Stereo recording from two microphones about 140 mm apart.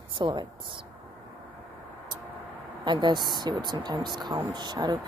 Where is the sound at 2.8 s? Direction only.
35° right (ahead or behind).